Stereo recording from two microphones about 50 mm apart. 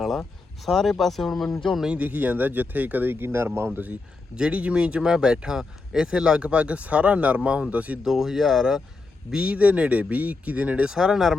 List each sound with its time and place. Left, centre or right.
0.0 s speech: centre
1.9 s speech: right
4.5 s speech: right
8.0 s speech: centre
9.3 s speech: right
10.8 s speech: centre